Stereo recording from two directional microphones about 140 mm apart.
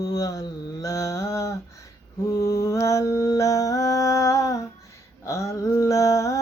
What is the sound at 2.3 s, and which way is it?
Mantra, 20° left (ahead or behind).